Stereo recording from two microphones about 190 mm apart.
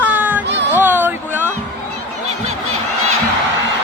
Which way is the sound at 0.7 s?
10° right (ahead or behind).